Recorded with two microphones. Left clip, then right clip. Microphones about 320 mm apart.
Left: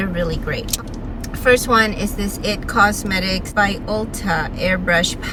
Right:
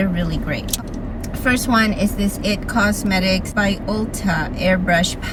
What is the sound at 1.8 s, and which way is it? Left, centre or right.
A woman's voice, centre.